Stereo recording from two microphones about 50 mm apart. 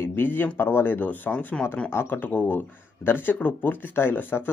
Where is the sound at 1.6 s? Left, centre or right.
Centre.